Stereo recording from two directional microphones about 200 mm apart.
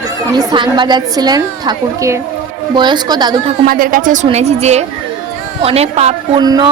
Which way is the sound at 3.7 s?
45° right (ahead or behind).